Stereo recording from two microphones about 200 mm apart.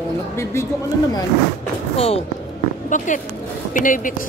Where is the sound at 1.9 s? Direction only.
30° left (ahead or behind).